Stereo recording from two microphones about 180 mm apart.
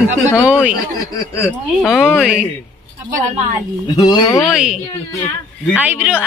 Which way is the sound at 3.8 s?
25° left (ahead or behind).